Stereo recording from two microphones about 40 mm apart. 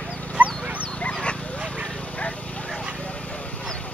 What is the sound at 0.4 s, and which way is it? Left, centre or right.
Dog, right.